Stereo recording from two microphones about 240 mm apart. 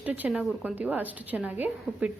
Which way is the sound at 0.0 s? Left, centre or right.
Centre.